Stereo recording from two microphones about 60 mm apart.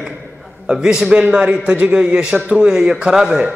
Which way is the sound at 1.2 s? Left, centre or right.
Right.